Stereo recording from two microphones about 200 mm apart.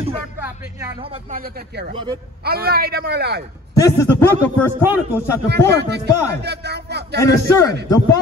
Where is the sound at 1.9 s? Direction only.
25° right (ahead or behind).